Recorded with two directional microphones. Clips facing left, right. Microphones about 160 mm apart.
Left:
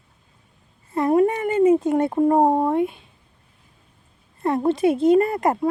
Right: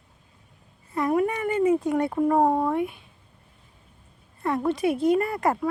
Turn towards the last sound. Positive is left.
turn(degrees=25)  # may be behind; listen again after turning